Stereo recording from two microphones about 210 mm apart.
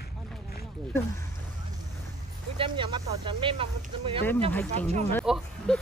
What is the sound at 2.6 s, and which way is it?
Speech, 25° right (ahead or behind).